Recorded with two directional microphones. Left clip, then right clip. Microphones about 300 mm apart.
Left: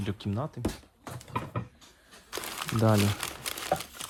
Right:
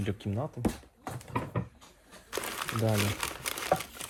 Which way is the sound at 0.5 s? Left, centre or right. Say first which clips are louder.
Right 1 dB; centre.